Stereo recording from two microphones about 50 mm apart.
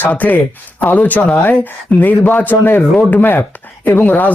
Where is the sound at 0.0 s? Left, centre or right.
Left.